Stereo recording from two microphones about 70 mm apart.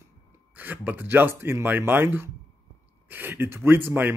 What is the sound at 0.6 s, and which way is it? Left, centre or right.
A man's voice, right.